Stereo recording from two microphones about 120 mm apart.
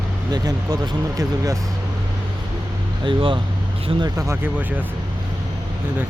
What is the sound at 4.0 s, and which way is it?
Speech, 30° right (ahead or behind).